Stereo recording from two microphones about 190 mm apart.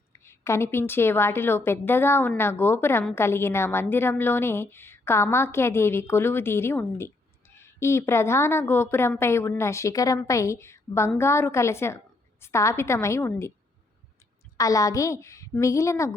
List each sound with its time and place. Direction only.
0.3 s a woman's voice: 15° left (ahead or behind)
14.6 s a woman's voice: 15° left (ahead or behind)